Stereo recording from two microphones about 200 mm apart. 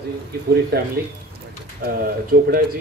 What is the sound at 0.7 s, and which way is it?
Speech, 55° right (ahead or behind).